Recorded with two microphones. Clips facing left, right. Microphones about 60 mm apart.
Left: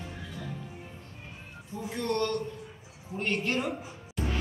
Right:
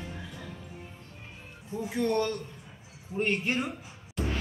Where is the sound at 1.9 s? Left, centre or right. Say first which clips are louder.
Right 1 dB; centre.